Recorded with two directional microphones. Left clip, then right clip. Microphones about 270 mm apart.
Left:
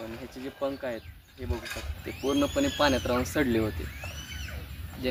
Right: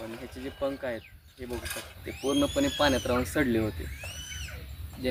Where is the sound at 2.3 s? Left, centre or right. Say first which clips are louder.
Even; centre.